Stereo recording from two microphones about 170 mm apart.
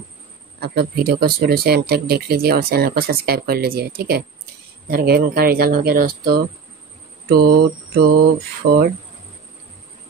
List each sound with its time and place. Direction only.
0.6 s speech: 65° right (ahead or behind)